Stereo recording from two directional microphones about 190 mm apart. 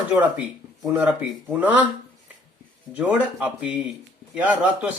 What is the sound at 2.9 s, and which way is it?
Speech, 5° right (ahead or behind).